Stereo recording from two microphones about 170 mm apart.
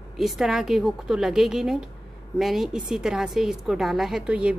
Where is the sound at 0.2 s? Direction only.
Centre (ahead or behind).